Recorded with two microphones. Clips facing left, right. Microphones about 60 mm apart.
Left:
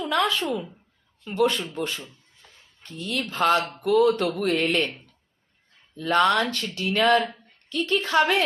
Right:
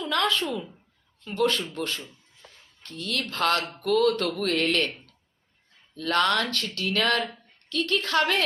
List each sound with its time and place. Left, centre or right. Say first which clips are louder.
0.0 s a woman's voice: left 2 dB; centre
4.9 s a sound: even; centre
5.9 s speech: left 3 dB; centre